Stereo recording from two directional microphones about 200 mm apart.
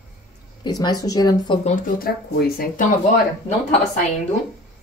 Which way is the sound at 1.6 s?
45° left (ahead or behind).